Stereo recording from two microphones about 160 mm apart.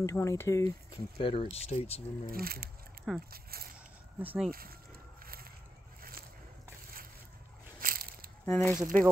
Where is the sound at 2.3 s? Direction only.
70° right (ahead or behind).